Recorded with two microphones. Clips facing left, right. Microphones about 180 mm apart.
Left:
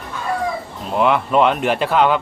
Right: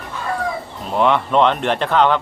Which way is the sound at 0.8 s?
5° left (ahead or behind).